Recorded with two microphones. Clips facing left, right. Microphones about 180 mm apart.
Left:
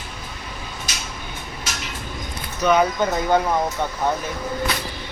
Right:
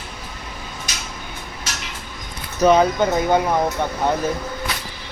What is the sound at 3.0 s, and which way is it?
Speech, 15° right (ahead or behind).